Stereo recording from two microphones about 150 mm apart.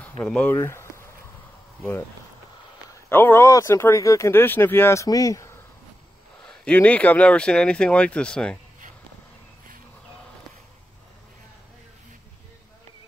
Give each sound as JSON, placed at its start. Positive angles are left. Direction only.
{"t": 0.2, "sound": "speech", "side_deg": 5}
{"t": 3.1, "sound": "speech", "side_deg": 15}
{"t": 6.4, "sound": "speech", "side_deg": 5}